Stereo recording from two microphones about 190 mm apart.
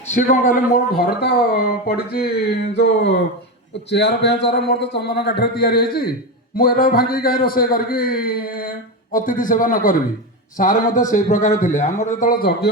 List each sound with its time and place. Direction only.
0.1 s a man's voice: 40° left (ahead or behind)